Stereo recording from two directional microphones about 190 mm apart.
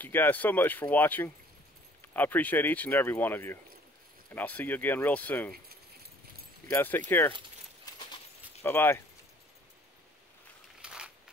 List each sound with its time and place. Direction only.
0.0 s speech: 10° left (ahead or behind)
6.7 s speech: 10° left (ahead or behind)
7.8 s keys jangling: 20° left (ahead or behind)
8.6 s speech: 10° left (ahead or behind)
10.8 s a sound: 5° right (ahead or behind)